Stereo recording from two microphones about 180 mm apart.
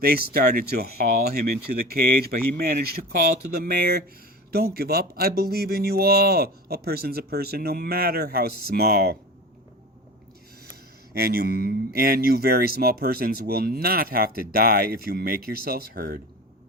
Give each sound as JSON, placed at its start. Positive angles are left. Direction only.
{"t": 0.0, "sound": "speech", "side_deg": -55}
{"t": 11.1, "sound": "speech", "side_deg": -55}